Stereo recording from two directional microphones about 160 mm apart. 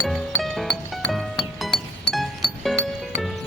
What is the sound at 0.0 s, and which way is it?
Music, centre (ahead or behind).